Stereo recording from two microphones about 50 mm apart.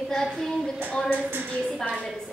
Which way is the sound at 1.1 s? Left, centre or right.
Right.